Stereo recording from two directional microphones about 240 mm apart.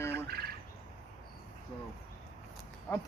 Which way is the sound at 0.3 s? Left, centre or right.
Right.